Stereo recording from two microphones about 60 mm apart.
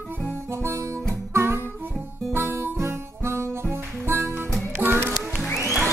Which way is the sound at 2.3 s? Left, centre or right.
Right.